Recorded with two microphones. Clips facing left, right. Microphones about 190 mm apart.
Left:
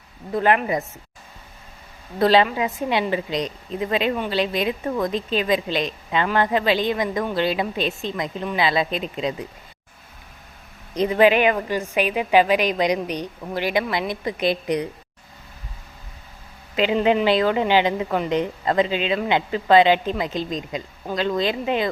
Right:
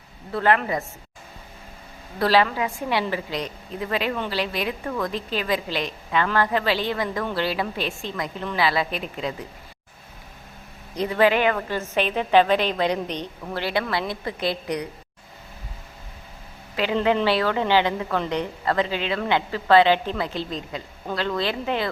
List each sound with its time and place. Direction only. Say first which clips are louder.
0.3 s speech: left 2 dB; 20° left (ahead or behind)
2.1 s a woman's voice: left 3 dB; 20° left (ahead or behind)
10.9 s speech: left 3 dB; 20° left (ahead or behind)
16.7 s a woman's voice: left 3 dB; 20° left (ahead or behind)